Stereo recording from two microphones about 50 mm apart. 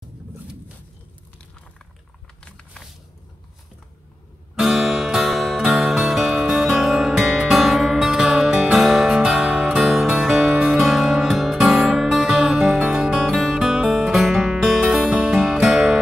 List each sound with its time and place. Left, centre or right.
2.4 s a sound: centre
4.6 s music: centre
10.5 s music: centre
10.8 s music: centre
15.1 s music: centre